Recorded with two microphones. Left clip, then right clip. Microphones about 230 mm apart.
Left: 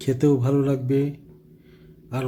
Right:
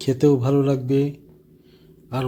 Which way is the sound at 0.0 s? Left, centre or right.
Centre.